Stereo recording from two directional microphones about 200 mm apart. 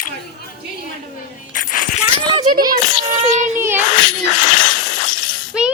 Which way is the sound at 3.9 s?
40° left (ahead or behind).